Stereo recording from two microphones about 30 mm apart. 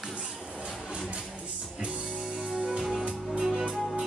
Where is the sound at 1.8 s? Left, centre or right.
Right.